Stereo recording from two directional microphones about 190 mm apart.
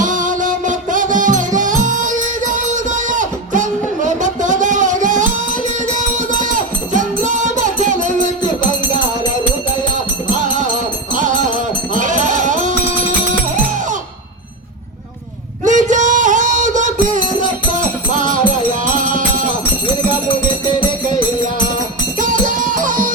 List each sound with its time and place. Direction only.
0.0 s music: 45° right (ahead or behind)
2.5 s a sound: 40° right (ahead or behind)
5.9 s music: 40° right (ahead or behind)
10.3 s music: 40° right (ahead or behind)
11.9 s sheep: 40° right (ahead or behind)
15.6 s music: 40° right (ahead or behind)
22.2 s music: 45° right (ahead or behind)